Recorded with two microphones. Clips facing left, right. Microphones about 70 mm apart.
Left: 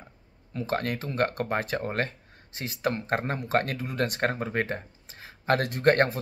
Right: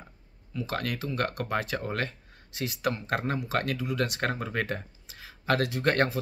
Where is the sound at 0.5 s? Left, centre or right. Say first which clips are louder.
Left 3 dB; left.